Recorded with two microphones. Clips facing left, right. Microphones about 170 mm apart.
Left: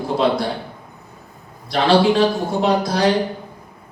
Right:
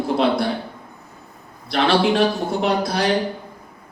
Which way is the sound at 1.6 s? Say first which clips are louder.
Left 3 dB; 60° right (ahead or behind).